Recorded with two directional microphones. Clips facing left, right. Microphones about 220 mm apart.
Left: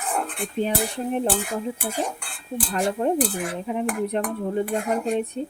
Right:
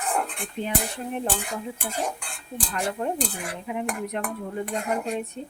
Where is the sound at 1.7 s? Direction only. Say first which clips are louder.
Left 2 dB; 5° left (ahead or behind).